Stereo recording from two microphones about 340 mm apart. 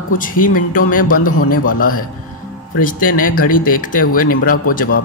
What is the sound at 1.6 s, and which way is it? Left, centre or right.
Speech, left.